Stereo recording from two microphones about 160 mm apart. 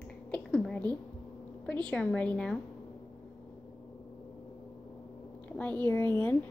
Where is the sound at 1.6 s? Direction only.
10° left (ahead or behind).